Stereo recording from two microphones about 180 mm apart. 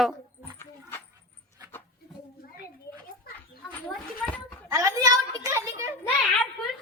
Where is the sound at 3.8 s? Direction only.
10° left (ahead or behind).